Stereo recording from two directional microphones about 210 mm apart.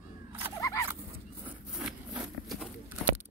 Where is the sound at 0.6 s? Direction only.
15° left (ahead or behind).